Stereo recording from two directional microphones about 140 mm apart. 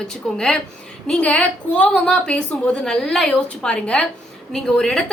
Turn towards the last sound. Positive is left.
turn(degrees=5)  # may be behind; listen again after turning